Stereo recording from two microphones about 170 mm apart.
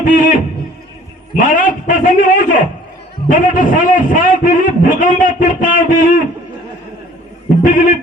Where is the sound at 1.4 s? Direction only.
50° left (ahead or behind).